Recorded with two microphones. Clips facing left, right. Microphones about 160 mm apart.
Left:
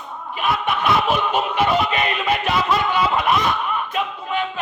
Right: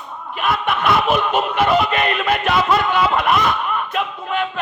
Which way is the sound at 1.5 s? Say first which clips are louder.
Right 3 dB; 55° right (ahead or behind).